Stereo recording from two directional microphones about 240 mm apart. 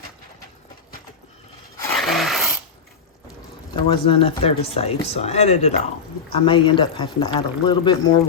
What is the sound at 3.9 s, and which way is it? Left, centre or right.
Speech, left.